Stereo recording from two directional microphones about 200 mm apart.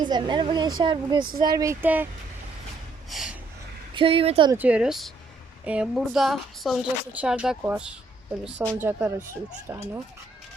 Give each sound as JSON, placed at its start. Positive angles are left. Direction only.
{"t": 0.0, "sound": "speech", "side_deg": -20}
{"t": 3.1, "sound": "gasp", "side_deg": 0}
{"t": 3.9, "sound": "speech", "side_deg": -25}
{"t": 4.5, "sound": "a woman's voice", "side_deg": -5}